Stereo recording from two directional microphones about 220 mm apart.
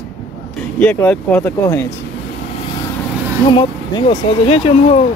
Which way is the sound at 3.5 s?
20° left (ahead or behind).